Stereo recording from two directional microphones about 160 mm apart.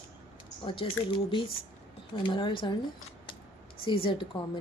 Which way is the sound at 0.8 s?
35° left (ahead or behind).